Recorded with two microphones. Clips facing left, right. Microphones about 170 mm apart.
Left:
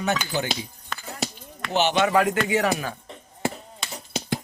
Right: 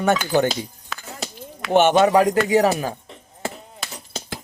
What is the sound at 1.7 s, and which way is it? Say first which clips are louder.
Speech: right 6 dB; 50° right (ahead or behind).